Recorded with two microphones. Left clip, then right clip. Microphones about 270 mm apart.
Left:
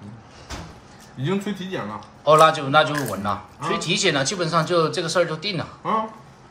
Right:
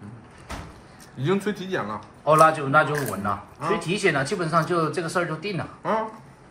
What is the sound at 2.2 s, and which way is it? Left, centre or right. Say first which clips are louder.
A man's voice: left 2 dB; centre.